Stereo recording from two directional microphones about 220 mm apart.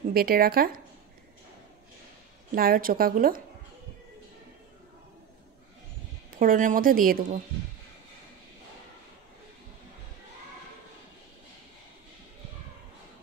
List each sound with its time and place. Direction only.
0.1 s speech: 45° right (ahead or behind)
2.5 s a woman's voice: 40° right (ahead or behind)
6.3 s a woman's voice: 40° right (ahead or behind)